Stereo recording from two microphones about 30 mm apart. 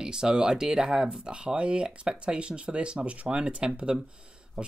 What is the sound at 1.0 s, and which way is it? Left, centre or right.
Speech, right.